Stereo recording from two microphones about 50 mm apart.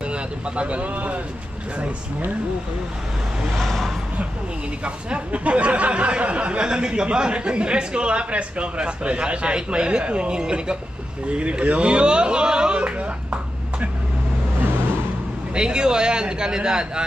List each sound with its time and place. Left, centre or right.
0.0 s speech: right
3.5 s speech: centre
4.8 s speech: right
15.5 s speech: centre